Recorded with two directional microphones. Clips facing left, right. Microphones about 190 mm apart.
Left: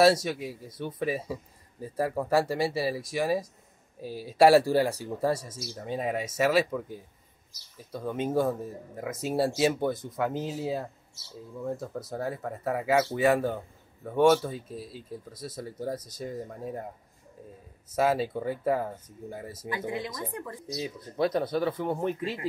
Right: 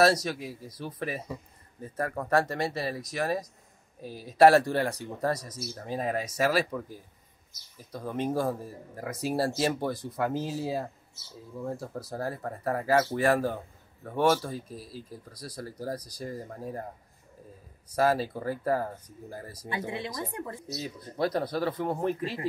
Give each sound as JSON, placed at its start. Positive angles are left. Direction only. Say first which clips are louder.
{"t": 0.0, "sound": "speech", "louder": "left 2 dB", "side_deg": 5}
{"t": 0.7, "sound": "speech", "louder": "left 3 dB", "side_deg": 25}
{"t": 0.9, "sound": "speech", "louder": "left 5 dB", "side_deg": 5}
{"t": 5.3, "sound": "speech", "louder": "left 2 dB", "side_deg": 25}
{"t": 5.9, "sound": "speech", "louder": "left 1 dB", "side_deg": 0}
{"t": 12.1, "sound": "speech", "louder": "left 1 dB", "side_deg": 0}
{"t": 15.0, "sound": "speech", "louder": "left 4 dB", "side_deg": 25}
{"t": 15.5, "sound": "speech", "louder": "left 1 dB", "side_deg": 0}
{"t": 17.9, "sound": "speech", "louder": "even", "side_deg": 0}
{"t": 20.2, "sound": "speech", "louder": "even", "side_deg": -25}
{"t": 20.6, "sound": "speech", "louder": "left 2 dB", "side_deg": 0}